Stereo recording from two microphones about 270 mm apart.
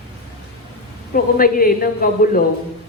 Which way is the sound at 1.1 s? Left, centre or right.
Left.